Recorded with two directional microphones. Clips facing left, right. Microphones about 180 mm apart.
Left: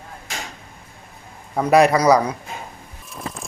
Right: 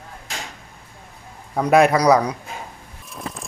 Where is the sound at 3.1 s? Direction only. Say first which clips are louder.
Even; centre (ahead or behind).